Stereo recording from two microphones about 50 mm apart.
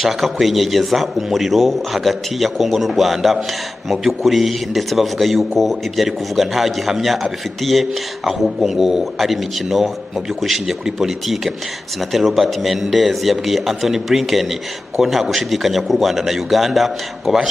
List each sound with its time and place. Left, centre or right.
0.0 s a man's voice: centre